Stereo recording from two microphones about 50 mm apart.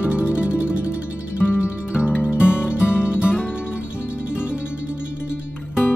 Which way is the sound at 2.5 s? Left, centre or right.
Left.